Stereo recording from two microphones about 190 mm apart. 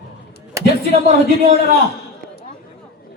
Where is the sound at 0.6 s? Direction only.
15° right (ahead or behind).